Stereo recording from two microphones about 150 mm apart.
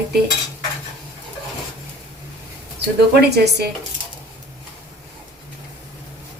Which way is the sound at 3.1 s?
90° right.